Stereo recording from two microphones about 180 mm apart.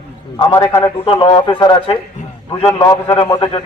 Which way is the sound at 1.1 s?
30° left (ahead or behind).